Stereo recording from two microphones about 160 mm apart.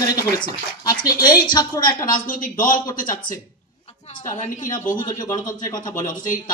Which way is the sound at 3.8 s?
40° left (ahead or behind).